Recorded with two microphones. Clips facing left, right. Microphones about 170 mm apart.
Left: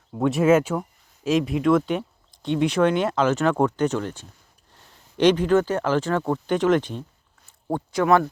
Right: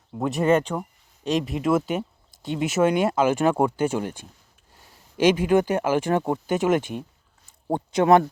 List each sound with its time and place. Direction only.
0.2 s speech: centre (ahead or behind)
7.7 s speech: 20° right (ahead or behind)